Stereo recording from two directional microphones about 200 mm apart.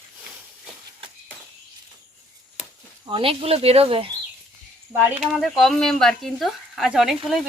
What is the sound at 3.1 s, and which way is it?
Speech, 25° right (ahead or behind).